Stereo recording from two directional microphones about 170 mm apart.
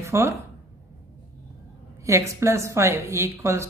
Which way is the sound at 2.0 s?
15° right (ahead or behind).